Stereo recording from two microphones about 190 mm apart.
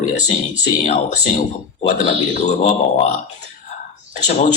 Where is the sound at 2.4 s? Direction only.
35° left (ahead or behind).